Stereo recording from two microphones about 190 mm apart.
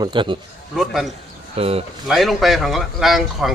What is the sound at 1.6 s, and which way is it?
Speech, 30° right (ahead or behind).